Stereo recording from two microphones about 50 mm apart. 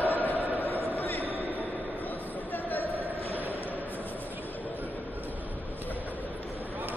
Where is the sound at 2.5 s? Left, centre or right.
Left.